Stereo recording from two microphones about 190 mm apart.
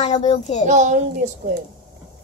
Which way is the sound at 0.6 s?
40° right (ahead or behind).